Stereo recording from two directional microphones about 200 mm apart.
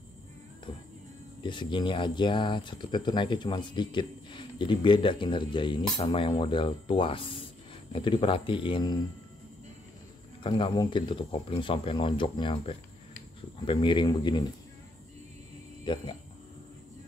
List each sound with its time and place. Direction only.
0.7 s music: 25° left (ahead or behind)
1.4 s speech: 25° left (ahead or behind)
10.4 s speech: 20° left (ahead or behind)
15.8 s speech: 25° left (ahead or behind)